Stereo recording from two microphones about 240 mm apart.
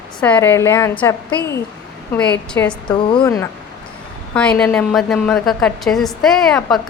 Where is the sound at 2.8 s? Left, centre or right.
Centre.